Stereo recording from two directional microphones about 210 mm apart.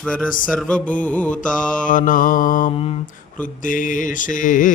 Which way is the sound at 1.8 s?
40° left (ahead or behind).